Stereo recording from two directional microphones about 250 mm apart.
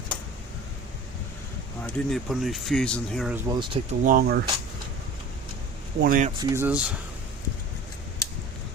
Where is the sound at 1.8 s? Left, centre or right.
Centre.